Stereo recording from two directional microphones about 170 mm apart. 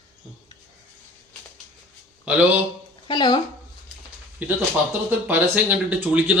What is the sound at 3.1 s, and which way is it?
Speech, 25° left (ahead or behind).